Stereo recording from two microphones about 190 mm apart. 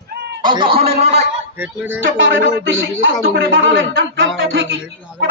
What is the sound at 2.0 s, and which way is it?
Speech, 90° right.